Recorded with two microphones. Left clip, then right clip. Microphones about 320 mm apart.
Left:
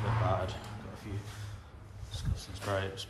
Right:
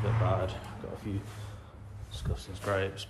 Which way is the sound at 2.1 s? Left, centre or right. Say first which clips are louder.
Right 3 dB; centre.